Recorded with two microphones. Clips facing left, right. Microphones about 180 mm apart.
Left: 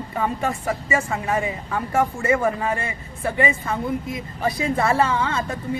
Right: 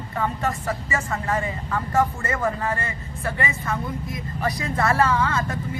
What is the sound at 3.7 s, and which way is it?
A woman's voice, 25° left (ahead or behind).